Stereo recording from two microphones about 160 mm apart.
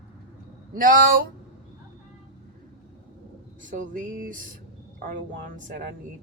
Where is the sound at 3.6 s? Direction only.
55° right (ahead or behind).